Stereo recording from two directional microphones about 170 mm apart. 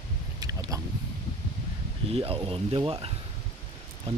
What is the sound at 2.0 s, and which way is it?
Speech, 35° right (ahead or behind).